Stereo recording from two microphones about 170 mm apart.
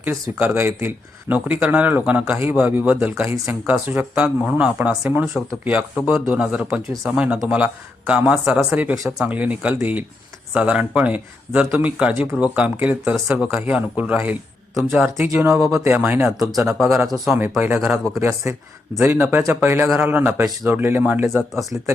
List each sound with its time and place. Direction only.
0.0 s a man's voice: 10° right (ahead or behind)
15.3 s a man's voice: 15° right (ahead or behind)
17.2 s a man's voice: 10° right (ahead or behind)
21.5 s a man's voice: centre (ahead or behind)